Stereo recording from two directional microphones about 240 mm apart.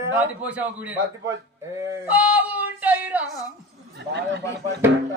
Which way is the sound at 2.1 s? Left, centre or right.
Centre.